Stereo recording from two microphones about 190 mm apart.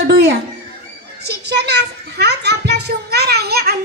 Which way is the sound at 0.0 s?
60° right (ahead or behind).